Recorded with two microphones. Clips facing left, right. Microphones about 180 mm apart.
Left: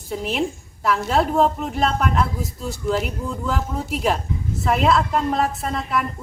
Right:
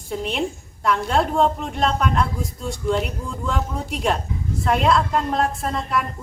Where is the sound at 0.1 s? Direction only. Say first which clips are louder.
Left 1 dB; centre (ahead or behind).